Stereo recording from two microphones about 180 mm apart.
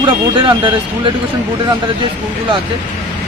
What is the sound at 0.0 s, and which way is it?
Speech, 25° right (ahead or behind).